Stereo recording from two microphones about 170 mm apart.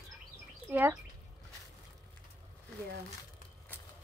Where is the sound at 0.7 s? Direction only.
10° right (ahead or behind).